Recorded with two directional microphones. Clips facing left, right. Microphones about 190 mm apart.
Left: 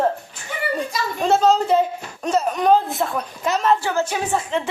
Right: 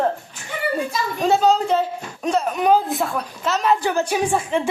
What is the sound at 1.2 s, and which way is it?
Speech, centre (ahead or behind).